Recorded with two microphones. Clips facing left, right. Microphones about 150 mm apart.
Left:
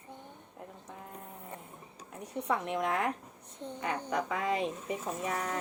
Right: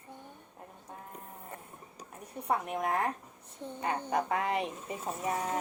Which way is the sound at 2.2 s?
70° left (ahead or behind).